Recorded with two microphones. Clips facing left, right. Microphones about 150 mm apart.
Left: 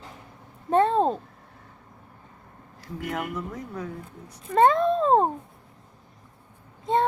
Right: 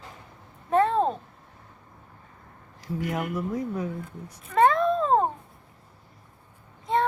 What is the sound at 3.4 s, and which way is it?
Speech, 10° right (ahead or behind).